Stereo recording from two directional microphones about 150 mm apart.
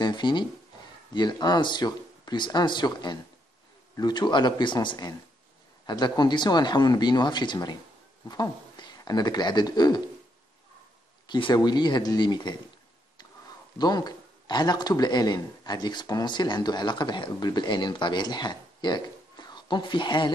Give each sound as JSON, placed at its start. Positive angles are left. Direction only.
{"t": 0.0, "sound": "a man's voice", "side_deg": 30}
{"t": 11.2, "sound": "a man's voice", "side_deg": 30}
{"t": 13.7, "sound": "a man's voice", "side_deg": 25}